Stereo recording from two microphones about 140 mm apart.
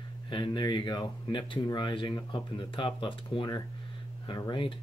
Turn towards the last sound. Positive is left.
turn(degrees=35)  # may be behind; listen again after turning